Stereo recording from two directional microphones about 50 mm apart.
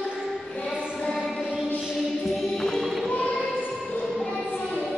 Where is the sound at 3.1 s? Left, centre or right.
Left.